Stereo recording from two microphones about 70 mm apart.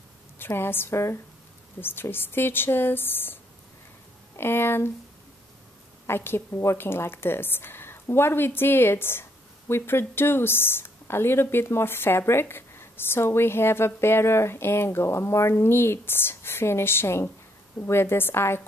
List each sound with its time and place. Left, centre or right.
0.4 s speech: left
4.4 s speech: left
6.0 s speech: left